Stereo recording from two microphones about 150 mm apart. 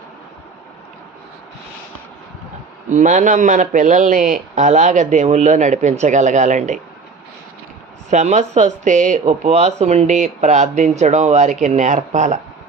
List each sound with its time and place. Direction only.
2.9 s speech: 55° right (ahead or behind)
8.1 s speech: 50° right (ahead or behind)